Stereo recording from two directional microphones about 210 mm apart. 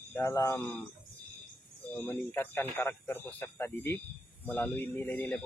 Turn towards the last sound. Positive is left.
turn(degrees=5)  # may be behind; listen again after turning